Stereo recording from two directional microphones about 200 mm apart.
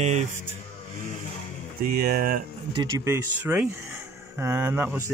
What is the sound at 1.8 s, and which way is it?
Speech, 50° right (ahead or behind).